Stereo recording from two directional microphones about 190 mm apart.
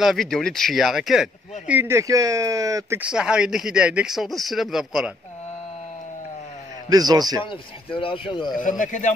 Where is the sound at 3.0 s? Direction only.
5° right (ahead or behind).